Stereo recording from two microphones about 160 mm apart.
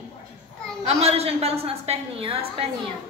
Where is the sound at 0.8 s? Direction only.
40° right (ahead or behind).